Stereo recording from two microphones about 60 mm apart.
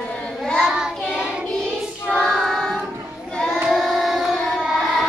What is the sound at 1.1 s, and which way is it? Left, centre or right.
Music, centre.